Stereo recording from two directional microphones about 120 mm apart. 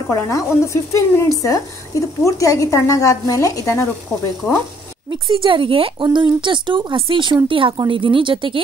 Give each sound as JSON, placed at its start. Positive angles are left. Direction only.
{"t": 0.1, "sound": "a woman's voice", "side_deg": 25}
{"t": 5.3, "sound": "a woman's voice", "side_deg": -45}